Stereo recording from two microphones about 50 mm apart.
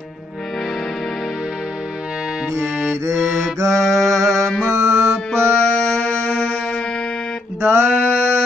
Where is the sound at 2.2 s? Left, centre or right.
Centre.